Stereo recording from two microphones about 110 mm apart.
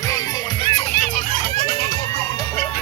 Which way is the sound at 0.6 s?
70° left (ahead or behind).